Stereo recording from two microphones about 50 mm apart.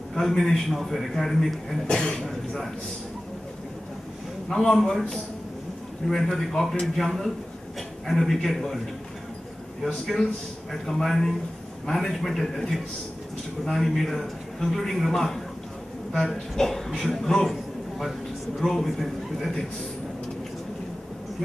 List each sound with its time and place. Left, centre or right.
0.1 s a man's voice: centre
1.9 s a man's voice: centre
2.2 s a man's voice: centre
4.5 s a man's voice: centre
10.7 s a man's voice: centre
18.6 s a man's voice: centre